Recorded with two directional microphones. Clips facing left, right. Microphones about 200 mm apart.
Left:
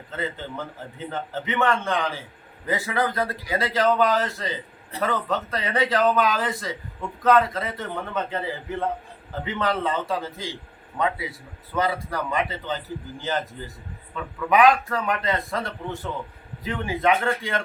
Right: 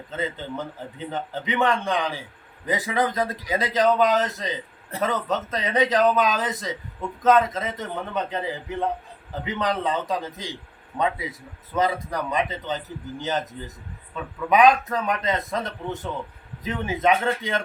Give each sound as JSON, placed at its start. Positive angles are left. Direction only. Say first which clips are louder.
{"t": 0.2, "sound": "a man's voice", "louder": "right 1 dB", "side_deg": -20}
{"t": 9.4, "sound": "a man's voice", "louder": "even", "side_deg": -15}
{"t": 14.5, "sound": "a man's voice", "louder": "right 1 dB", "side_deg": -20}